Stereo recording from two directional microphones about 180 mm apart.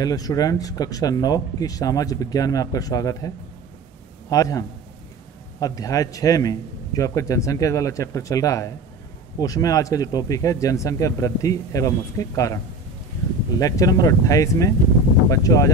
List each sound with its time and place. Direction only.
0.0 s speech: 20° left (ahead or behind)
13.6 s speech: 20° left (ahead or behind)